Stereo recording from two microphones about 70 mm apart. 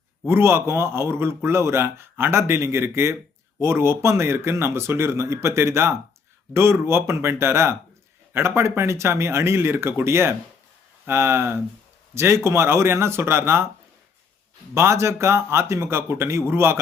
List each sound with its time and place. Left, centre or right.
0.3 s speech: right
14.8 s speech: right